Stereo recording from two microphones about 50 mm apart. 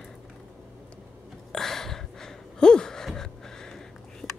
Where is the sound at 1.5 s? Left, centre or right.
Centre.